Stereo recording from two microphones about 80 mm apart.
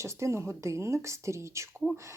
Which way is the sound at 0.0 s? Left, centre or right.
Right.